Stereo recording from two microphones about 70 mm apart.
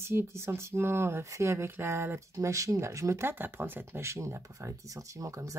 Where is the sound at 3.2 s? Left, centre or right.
Right.